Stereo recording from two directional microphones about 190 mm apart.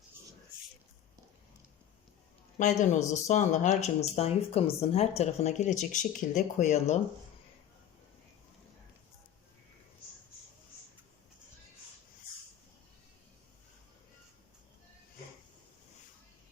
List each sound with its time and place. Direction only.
2.6 s speech: 40° left (ahead or behind)